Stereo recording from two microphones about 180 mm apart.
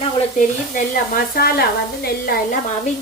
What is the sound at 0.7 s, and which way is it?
A woman's voice, 50° left (ahead or behind).